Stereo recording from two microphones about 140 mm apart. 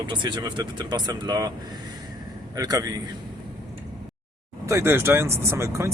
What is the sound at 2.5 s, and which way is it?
Speech, 25° right (ahead or behind).